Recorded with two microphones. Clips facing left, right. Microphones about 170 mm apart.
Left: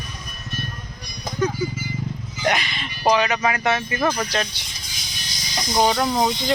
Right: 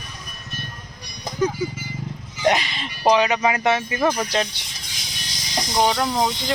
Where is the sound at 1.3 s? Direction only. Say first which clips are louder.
Right 1 dB; 10° right (ahead or behind).